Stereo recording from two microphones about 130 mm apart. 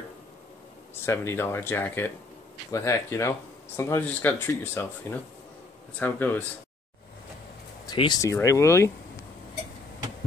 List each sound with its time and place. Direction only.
1.0 s speech: 20° left (ahead or behind)
5.9 s speech: 15° left (ahead or behind)
7.8 s speech: 35° left (ahead or behind)